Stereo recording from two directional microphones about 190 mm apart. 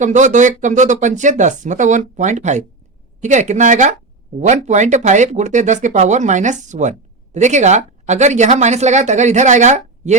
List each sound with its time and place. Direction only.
0.0 s speech: 40° right (ahead or behind)